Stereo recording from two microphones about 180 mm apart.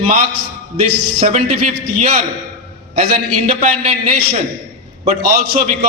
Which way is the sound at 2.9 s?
40° right (ahead or behind).